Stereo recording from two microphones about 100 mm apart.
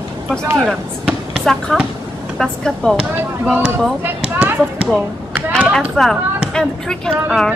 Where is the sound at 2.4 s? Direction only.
5° left (ahead or behind).